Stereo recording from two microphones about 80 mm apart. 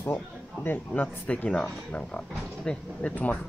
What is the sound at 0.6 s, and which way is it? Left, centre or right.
Speech, left.